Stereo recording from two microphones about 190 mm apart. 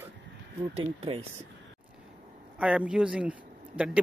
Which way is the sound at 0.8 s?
30° right (ahead or behind).